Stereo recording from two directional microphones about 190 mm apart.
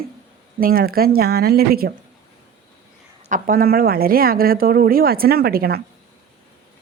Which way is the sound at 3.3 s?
45° right (ahead or behind).